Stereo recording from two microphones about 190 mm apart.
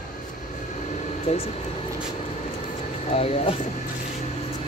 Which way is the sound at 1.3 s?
35° left (ahead or behind).